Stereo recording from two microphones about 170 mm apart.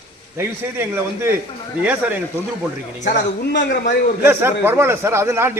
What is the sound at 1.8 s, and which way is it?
Speech, 10° right (ahead or behind).